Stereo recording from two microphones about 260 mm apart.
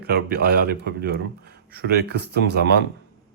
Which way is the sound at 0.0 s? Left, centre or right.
Right.